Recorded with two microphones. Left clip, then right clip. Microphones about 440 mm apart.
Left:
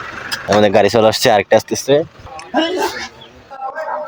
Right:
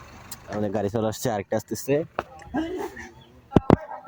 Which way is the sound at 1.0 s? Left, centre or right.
Right.